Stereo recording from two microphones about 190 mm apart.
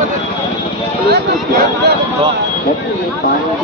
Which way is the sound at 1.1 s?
60° right (ahead or behind).